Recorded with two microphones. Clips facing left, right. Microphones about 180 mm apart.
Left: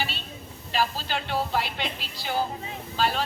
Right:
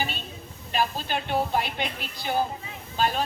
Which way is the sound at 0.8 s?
20° right (ahead or behind).